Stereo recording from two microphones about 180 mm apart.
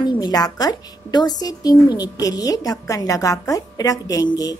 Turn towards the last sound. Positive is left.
turn(degrees=20)  # may be behind; listen again after turning